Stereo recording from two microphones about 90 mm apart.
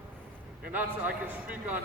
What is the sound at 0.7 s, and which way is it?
A man's voice, 20° right (ahead or behind).